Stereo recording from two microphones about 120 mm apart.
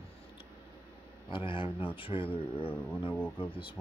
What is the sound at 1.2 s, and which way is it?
Speech, 45° left (ahead or behind).